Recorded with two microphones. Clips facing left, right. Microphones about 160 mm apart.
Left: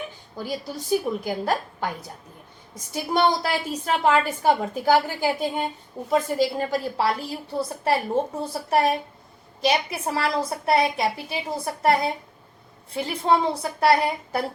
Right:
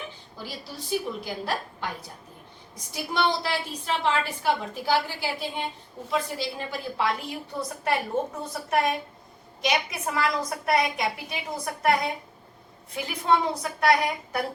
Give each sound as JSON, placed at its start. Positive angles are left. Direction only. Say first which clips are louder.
{"t": 0.3, "sound": "a woman's voice", "louder": "left 9 dB", "side_deg": 45}